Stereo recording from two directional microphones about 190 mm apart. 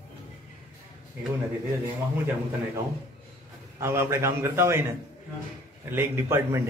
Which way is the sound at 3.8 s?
15° right (ahead or behind).